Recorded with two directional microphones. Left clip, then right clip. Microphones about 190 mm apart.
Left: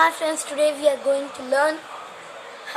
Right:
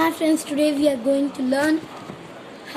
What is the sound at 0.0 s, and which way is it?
A woman's voice, 20° left (ahead or behind).